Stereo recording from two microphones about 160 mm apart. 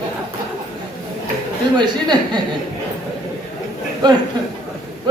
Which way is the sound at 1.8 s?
25° right (ahead or behind).